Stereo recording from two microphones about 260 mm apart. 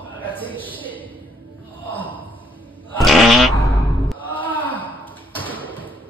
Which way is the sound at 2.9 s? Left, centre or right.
Centre.